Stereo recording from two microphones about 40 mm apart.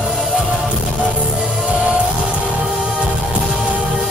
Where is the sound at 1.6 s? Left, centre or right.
Right.